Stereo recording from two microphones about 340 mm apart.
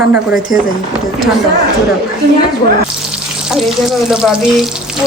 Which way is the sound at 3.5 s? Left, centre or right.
Centre.